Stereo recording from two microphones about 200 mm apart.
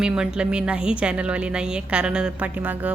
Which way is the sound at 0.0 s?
5° right (ahead or behind).